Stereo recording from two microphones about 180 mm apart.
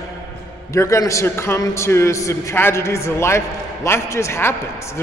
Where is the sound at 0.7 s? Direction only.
15° left (ahead or behind).